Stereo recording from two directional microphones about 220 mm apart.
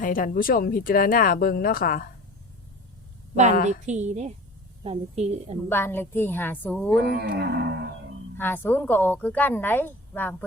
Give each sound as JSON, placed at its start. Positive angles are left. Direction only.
{"t": 0.0, "sound": "speech", "side_deg": 40}
{"t": 3.8, "sound": "a woman's voice", "side_deg": -30}
{"t": 5.6, "sound": "a woman's voice", "side_deg": 10}
{"t": 7.1, "sound": "music", "side_deg": -50}
{"t": 8.4, "sound": "a woman's voice", "side_deg": 10}